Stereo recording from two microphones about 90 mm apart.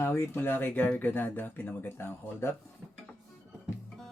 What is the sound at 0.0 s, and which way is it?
Speech, 25° left (ahead or behind).